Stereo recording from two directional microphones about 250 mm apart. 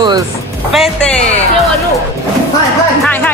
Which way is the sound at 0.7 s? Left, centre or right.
Centre.